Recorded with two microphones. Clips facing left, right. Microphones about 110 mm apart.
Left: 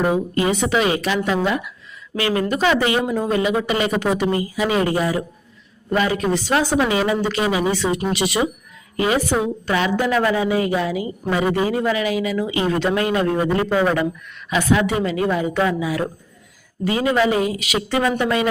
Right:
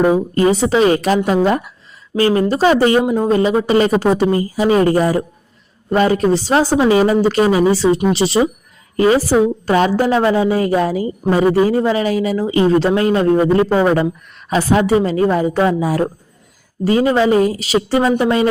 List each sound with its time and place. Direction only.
0.3 s a woman's voice: 35° right (ahead or behind)
3.0 s a woman's voice: 25° right (ahead or behind)